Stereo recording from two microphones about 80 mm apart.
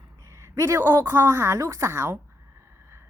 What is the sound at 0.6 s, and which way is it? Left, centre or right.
Speech, right.